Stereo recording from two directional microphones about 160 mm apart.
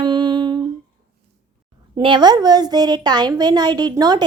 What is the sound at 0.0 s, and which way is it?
Humming, 30° right (ahead or behind).